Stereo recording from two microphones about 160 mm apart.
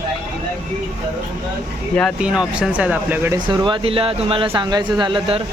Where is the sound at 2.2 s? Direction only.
5° right (ahead or behind).